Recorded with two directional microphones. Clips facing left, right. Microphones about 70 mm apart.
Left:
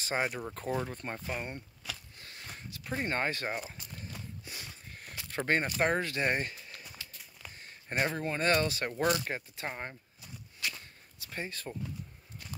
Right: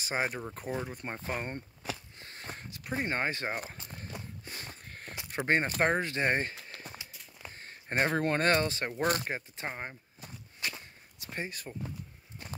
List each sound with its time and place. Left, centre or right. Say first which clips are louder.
0.0 s speech: even; centre
1.2 s a sound: right 2 dB; right
2.8 s speech: even; right
3.5 s a sound: right 1 dB; right
4.5 s sniff: right 2 dB; right
5.1 s a sound: right 1 dB; centre
5.7 s speech: right 1 dB; right
7.5 s a sound: right 2 dB; right
8.1 s speech: right 5 dB; right
8.5 s speech: right 1 dB; right
9.0 s speech: even; right
9.3 s speech: right 1 dB; centre
10.2 s walk: even; right